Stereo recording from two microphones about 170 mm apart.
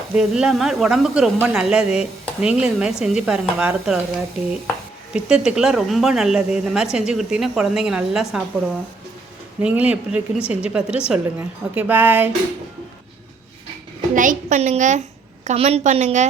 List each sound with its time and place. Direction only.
0.1 s a woman's voice: 5° right (ahead or behind)
5.1 s a woman's voice: 5° right (ahead or behind)
9.6 s a woman's voice: 10° right (ahead or behind)
14.1 s a woman's voice: 50° right (ahead or behind)